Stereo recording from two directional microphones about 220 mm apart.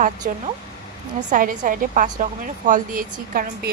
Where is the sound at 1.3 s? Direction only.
40° right (ahead or behind).